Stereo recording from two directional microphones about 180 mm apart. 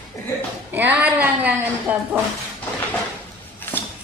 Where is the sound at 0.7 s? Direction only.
10° right (ahead or behind).